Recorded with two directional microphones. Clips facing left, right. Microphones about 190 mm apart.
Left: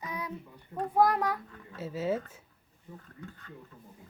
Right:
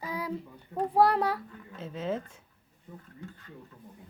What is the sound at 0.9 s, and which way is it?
Speech, 30° right (ahead or behind).